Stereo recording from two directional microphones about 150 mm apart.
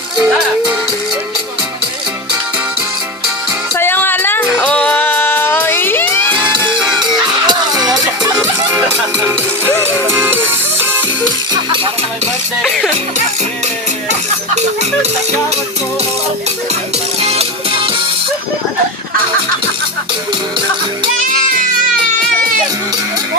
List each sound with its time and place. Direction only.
0.2 s music: 10° right (ahead or behind)
3.8 s music: 15° left (ahead or behind)
7.0 s music: 30° right (ahead or behind)
9.8 s music: 15° right (ahead or behind)
11.5 s music: 30° right (ahead or behind)
12.6 s music: centre (ahead or behind)
17.2 s music: 40° right (ahead or behind)